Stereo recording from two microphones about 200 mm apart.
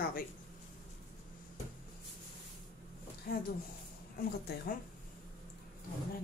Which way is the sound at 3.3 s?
50° left (ahead or behind).